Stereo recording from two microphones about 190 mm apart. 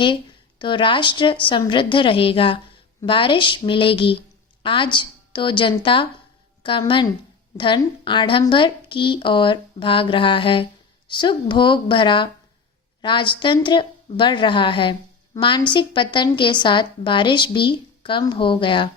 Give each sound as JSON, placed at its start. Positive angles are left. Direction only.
{"t": 0.6, "sound": "a woman's voice", "side_deg": 25}